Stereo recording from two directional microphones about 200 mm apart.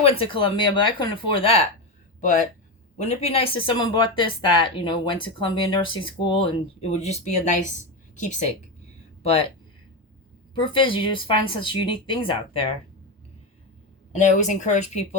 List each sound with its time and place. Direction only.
0.0 s speech: 30° left (ahead or behind)
3.0 s speech: 35° left (ahead or behind)
10.5 s speech: 25° left (ahead or behind)
14.1 s a woman's voice: 35° left (ahead or behind)